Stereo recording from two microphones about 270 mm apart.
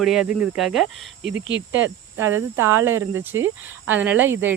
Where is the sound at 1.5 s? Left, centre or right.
Right.